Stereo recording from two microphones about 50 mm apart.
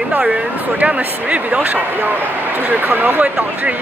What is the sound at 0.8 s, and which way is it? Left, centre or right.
Speech, right.